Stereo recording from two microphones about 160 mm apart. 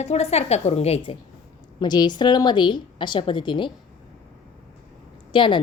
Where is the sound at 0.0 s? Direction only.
40° left (ahead or behind).